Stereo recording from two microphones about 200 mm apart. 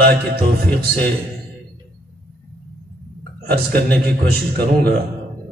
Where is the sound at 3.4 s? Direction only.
50° right (ahead or behind).